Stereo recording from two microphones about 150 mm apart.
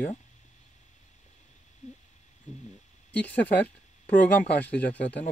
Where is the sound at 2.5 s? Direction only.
50° left (ahead or behind).